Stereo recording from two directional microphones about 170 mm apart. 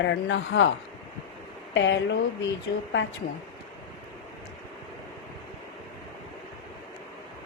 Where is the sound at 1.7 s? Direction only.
90° left.